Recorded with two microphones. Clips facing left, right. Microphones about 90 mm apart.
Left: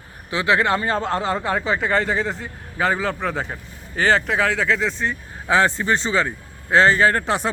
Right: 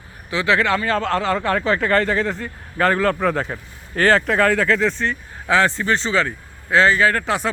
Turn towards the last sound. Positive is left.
turn(degrees=25)  # may be behind; listen again after turning